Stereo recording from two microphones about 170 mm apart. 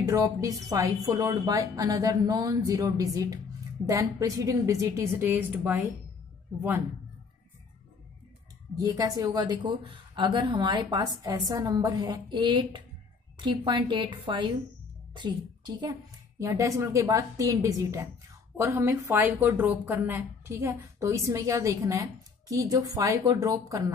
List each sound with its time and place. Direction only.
0.0 s a woman's voice: 20° right (ahead or behind)
8.7 s a woman's voice: 20° right (ahead or behind)